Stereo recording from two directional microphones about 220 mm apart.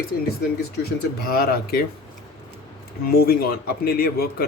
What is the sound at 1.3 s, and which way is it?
Speech, 45° left (ahead or behind).